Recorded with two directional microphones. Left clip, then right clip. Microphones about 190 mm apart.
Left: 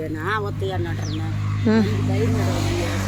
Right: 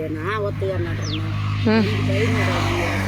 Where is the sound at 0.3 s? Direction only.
15° left (ahead or behind).